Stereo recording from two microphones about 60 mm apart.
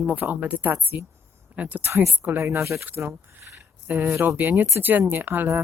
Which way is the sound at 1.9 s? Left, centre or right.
Right.